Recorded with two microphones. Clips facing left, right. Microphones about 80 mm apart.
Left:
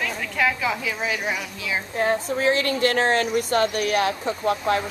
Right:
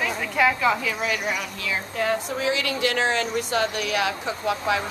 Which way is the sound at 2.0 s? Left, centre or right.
Left.